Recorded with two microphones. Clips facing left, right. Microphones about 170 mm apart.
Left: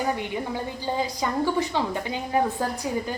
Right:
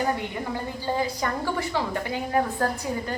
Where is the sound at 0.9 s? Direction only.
20° left (ahead or behind).